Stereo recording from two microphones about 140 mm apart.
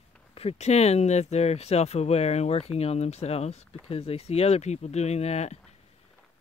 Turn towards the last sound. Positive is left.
turn(degrees=50)  # may be behind; listen again after turning